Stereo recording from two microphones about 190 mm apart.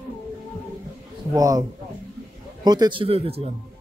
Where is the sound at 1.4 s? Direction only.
20° right (ahead or behind).